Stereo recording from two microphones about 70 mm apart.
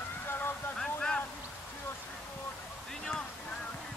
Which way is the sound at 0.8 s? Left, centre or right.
Centre.